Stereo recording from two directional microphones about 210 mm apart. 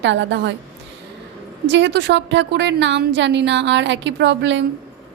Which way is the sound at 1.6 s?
60° right (ahead or behind).